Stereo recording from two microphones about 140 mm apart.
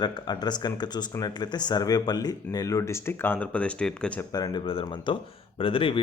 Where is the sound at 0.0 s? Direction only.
30° left (ahead or behind); by 4.3 s 10° left (ahead or behind).